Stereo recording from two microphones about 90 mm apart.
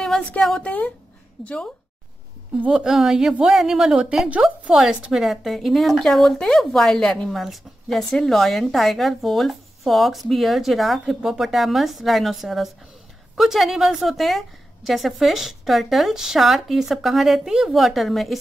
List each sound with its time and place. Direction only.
0.4 s a woman's voice: 5° left (ahead or behind)
0.7 s speech: 15° left (ahead or behind)
2.5 s a woman's voice: 10° right (ahead or behind)